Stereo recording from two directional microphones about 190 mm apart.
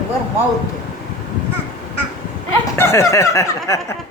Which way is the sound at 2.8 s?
15° left (ahead or behind).